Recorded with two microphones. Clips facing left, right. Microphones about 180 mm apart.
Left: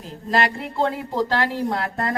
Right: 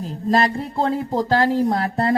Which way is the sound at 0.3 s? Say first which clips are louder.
Right 3 dB; 35° right (ahead or behind).